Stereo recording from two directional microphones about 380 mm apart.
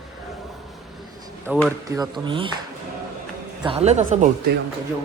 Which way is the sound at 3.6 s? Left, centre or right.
Centre.